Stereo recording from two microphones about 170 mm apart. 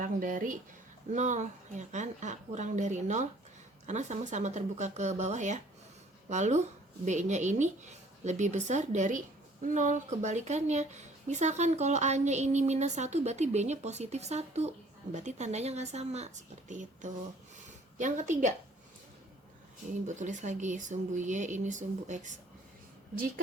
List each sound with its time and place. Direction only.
0.0 s speech: 55° right (ahead or behind)
20.1 s speech: 45° right (ahead or behind)